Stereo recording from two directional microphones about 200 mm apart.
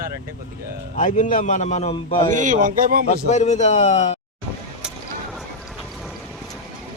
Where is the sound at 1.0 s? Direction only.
40° left (ahead or behind).